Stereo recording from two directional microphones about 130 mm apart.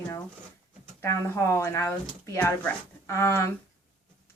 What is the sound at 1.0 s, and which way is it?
Speech, 20° left (ahead or behind).